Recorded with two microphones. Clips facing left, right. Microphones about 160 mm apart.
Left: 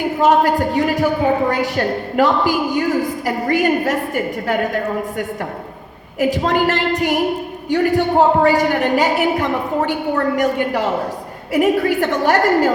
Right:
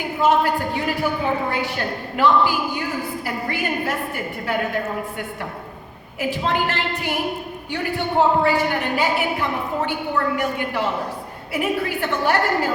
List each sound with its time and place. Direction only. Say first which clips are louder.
0.2 s a woman's voice: left 4 dB; 40° left (ahead or behind)